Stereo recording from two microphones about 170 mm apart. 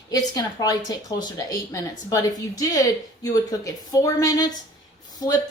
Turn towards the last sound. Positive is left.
turn(degrees=20)  # may be behind; listen again after turning